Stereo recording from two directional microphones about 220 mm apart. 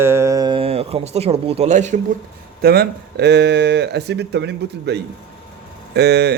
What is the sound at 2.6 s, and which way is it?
A man's voice, 45° right (ahead or behind).